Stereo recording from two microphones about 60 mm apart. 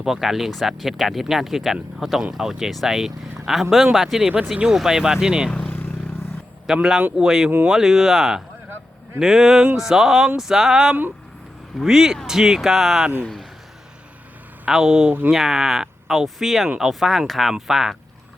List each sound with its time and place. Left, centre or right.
0.0 s speech: centre
4.5 s speech: centre
5.5 s speech: centre
6.7 s speech: centre
14.8 s speech: right
15.3 s speech: centre